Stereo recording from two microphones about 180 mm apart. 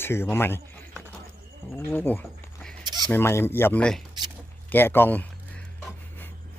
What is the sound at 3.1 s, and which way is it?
Speech, 15° left (ahead or behind).